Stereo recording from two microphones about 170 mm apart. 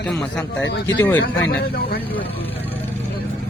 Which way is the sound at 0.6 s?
90° left.